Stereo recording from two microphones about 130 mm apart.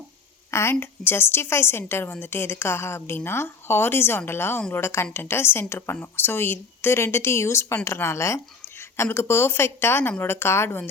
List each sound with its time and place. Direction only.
0.5 s speech: 20° left (ahead or behind)